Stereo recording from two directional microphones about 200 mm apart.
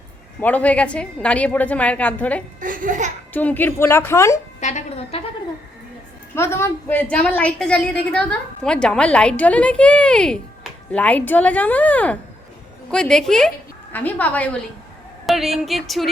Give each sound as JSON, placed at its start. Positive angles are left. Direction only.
{"t": 0.3, "sound": "a woman's voice", "side_deg": 5}
{"t": 2.6, "sound": "speech", "side_deg": -40}
{"t": 3.3, "sound": "a woman's voice", "side_deg": 10}
{"t": 4.6, "sound": "speech", "side_deg": 35}
{"t": 6.3, "sound": "a woman's voice", "side_deg": 15}